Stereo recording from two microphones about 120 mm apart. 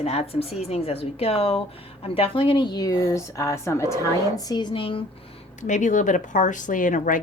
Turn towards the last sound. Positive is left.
turn(degrees=90)